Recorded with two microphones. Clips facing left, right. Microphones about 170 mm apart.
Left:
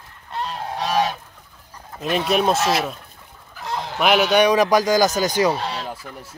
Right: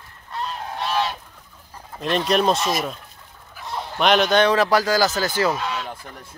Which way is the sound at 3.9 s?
5° left (ahead or behind).